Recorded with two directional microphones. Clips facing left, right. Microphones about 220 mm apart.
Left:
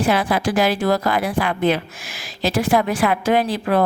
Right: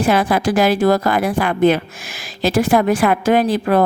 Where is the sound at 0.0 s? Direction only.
45° right (ahead or behind).